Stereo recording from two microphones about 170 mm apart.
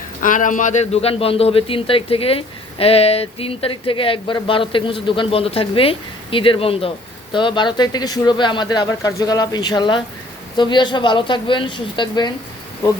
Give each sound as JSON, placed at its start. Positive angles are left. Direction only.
{"t": 0.2, "sound": "a man's voice", "side_deg": 50}